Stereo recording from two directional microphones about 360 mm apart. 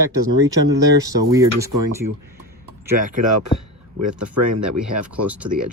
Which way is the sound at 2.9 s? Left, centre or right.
Right.